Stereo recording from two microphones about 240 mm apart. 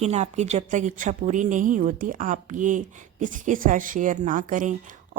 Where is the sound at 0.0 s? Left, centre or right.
Right.